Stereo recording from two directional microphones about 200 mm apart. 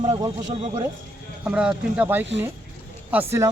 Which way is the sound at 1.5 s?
5° right (ahead or behind).